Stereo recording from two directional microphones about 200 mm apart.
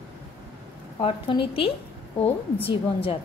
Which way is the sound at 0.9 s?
25° left (ahead or behind).